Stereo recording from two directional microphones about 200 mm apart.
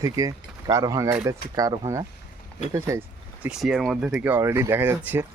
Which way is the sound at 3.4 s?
Centre (ahead or behind).